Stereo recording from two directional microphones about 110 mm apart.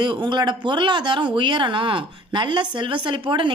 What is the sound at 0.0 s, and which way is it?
Speech, 45° right (ahead or behind).